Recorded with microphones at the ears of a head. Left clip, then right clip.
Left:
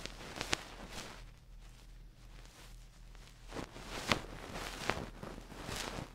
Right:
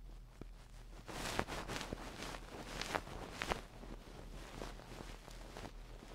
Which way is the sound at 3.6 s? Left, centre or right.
Left.